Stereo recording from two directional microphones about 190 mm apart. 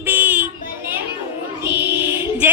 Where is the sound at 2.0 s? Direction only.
10° right (ahead or behind).